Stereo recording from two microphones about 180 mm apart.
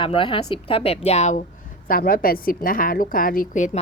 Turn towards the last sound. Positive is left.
turn(degrees=40)  # may be behind; listen again after turning